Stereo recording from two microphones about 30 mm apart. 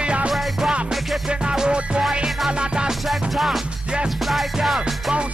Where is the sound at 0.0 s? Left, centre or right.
Right.